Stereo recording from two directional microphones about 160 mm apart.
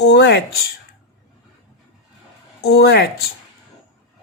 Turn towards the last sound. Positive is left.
turn(degrees=85)